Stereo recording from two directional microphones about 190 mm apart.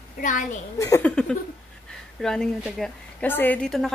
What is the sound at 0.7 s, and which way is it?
Speech, 15° left (ahead or behind).